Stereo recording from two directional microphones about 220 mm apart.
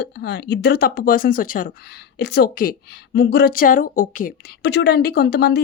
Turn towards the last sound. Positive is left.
turn(degrees=45)  # may be behind; listen again after turning